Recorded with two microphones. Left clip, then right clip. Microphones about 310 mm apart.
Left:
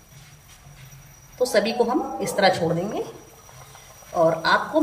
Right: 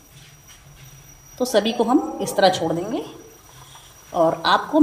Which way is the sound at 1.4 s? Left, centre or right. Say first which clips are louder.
Right 1 dB; centre.